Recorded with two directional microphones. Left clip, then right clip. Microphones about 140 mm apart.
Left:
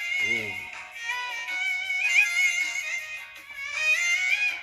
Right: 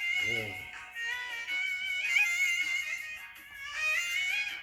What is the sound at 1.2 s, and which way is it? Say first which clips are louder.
Music: left 5 dB; 45° left (ahead or behind).